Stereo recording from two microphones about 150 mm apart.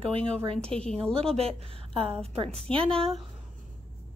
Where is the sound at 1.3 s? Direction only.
40° right (ahead or behind).